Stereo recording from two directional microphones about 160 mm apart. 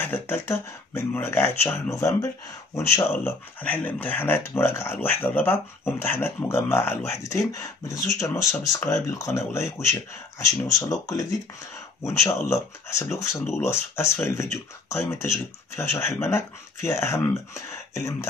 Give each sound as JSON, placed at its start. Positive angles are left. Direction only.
{"t": 0.0, "sound": "speech", "side_deg": 15}